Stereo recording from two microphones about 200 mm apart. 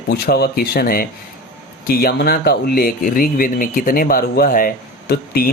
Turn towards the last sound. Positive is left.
turn(degrees=50)  # may be behind; listen again after turning